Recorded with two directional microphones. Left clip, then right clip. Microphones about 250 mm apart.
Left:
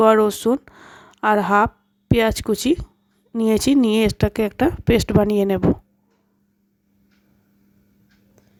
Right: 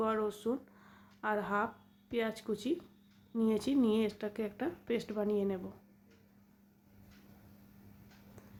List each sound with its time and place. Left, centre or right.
0.0 s speech: left